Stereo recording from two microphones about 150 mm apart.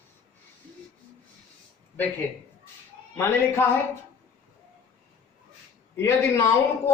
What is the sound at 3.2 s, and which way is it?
Speech, 15° left (ahead or behind).